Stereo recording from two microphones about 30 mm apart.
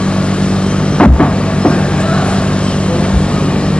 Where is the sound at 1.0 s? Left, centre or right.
Left.